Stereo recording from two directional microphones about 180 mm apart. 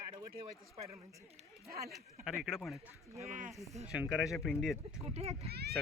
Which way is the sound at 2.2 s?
Centre (ahead or behind).